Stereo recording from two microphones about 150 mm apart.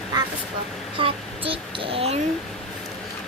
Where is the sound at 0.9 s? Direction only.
35° right (ahead or behind).